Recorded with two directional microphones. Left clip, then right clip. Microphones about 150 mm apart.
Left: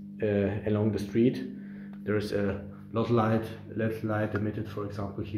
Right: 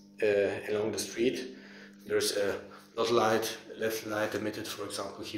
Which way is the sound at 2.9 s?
20° right (ahead or behind).